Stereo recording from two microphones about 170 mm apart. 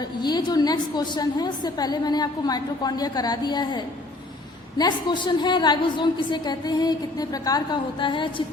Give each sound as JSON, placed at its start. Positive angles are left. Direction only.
{"t": 0.2, "sound": "a woman's voice", "side_deg": 25}